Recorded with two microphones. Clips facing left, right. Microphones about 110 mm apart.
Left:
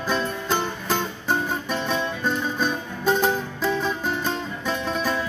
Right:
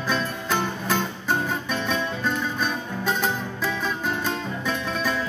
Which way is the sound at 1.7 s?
15° left (ahead or behind).